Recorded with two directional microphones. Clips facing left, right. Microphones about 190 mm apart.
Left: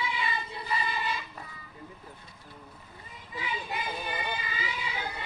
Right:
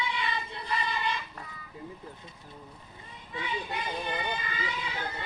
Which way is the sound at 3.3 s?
5° left (ahead or behind).